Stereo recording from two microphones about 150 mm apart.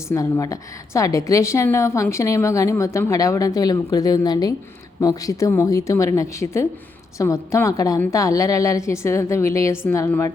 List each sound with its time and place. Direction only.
0.1 s a woman's voice: 20° left (ahead or behind)